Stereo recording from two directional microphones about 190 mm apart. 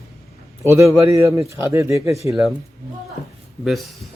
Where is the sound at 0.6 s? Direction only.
15° right (ahead or behind).